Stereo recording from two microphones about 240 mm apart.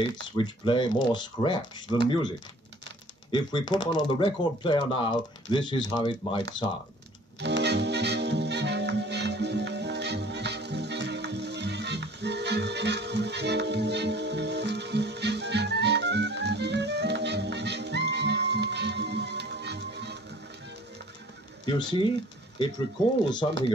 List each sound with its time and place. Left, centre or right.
0.0 s speech: centre
7.3 s music: right
21.6 s speech: centre